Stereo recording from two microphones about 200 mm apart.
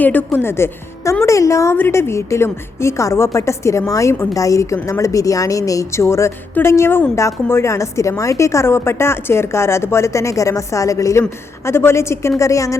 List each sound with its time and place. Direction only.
0.0 s a woman's voice: 10° left (ahead or behind)